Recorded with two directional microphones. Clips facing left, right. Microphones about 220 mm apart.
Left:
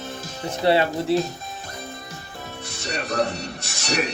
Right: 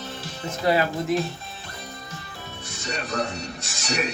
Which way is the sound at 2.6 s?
60° left (ahead or behind).